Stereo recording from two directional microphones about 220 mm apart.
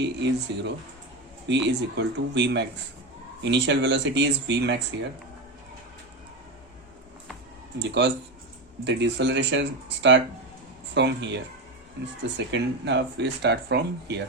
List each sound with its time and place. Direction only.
0.0 s speech: 55° right (ahead or behind)
7.8 s speech: 50° right (ahead or behind)
12.5 s speech: 50° right (ahead or behind)